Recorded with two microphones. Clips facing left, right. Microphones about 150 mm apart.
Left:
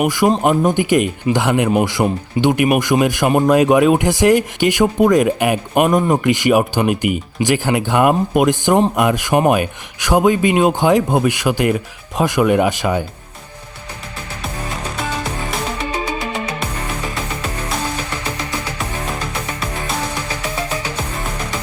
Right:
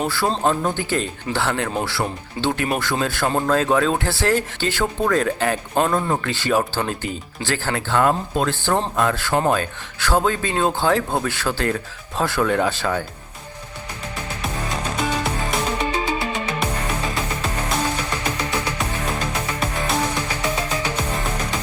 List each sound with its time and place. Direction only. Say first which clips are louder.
0.0 s speech: left 6 dB; 15° left (ahead or behind)
15.9 s music: left 1 dB; 20° left (ahead or behind)